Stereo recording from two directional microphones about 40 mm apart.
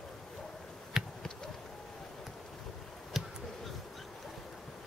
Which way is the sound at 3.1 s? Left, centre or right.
Centre.